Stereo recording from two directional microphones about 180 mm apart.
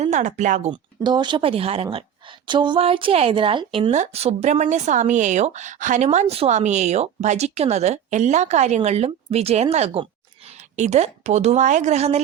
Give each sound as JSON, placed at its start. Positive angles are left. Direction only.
{"t": 0.0, "sound": "speech", "side_deg": -40}
{"t": 0.7, "sound": "speech", "side_deg": -25}